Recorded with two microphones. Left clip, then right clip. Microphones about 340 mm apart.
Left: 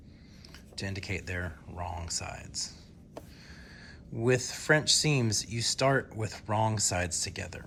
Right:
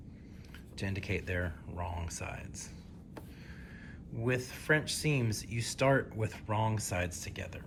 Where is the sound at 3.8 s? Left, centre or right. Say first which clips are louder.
Left 7 dB; centre.